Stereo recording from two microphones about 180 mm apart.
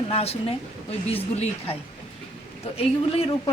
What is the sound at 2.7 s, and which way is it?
Speech, 30° left (ahead or behind).